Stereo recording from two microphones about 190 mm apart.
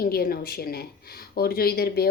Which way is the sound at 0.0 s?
50° left (ahead or behind).